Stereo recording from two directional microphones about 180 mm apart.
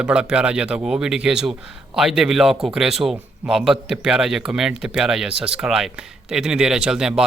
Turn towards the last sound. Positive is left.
turn(degrees=-5)  # may be behind; listen again after turning